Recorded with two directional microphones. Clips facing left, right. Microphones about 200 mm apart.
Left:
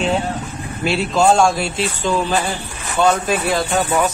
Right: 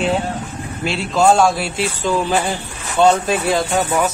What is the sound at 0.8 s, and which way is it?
Speech, 5° left (ahead or behind).